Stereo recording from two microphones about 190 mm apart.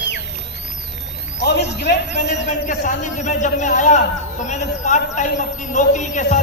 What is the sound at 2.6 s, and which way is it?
A man's voice, 40° left (ahead or behind).